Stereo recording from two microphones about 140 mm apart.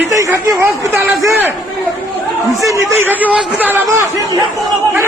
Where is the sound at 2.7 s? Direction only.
15° right (ahead or behind).